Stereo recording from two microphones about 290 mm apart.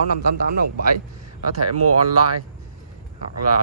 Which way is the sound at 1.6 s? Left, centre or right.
Right.